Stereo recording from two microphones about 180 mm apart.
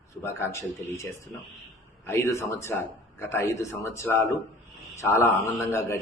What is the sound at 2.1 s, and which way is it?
Speech, 15° left (ahead or behind).